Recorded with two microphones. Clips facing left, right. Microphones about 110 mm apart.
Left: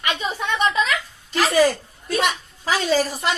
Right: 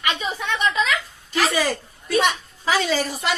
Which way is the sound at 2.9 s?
40° left (ahead or behind).